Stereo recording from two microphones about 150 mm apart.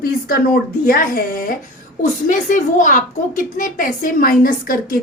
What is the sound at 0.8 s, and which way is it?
A woman's voice, 70° left (ahead or behind).